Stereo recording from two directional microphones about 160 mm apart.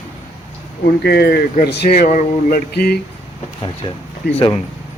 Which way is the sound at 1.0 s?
90° left.